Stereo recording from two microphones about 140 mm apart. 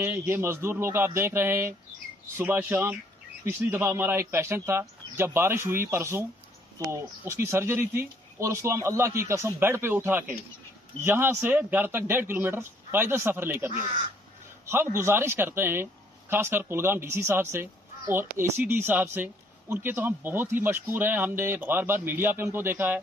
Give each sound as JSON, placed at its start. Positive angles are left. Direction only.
{"t": 0.3, "sound": "speech", "side_deg": -15}
{"t": 15.0, "sound": "speech", "side_deg": -20}